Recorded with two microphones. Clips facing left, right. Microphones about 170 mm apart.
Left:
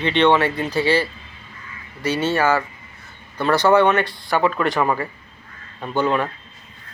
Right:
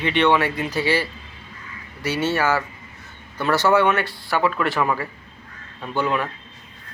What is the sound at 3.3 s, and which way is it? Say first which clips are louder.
Speech: left 3 dB; 15° left (ahead or behind).